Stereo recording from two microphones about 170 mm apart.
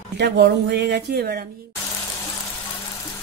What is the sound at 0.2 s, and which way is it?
Speech, 75° right (ahead or behind).